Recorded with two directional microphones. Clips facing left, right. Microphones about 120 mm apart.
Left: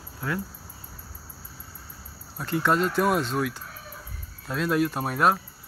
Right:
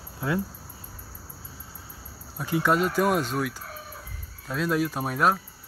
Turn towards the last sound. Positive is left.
turn(degrees=0)  # may be behind; listen again after turning